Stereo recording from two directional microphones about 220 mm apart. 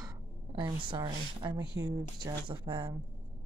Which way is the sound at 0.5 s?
20° right (ahead or behind).